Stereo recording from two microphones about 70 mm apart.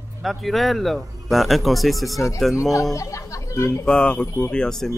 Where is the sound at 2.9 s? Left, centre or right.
Left.